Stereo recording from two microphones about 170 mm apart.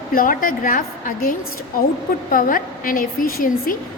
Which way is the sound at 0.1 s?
55° left (ahead or behind).